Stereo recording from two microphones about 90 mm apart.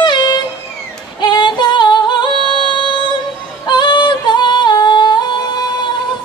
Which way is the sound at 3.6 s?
55° left (ahead or behind).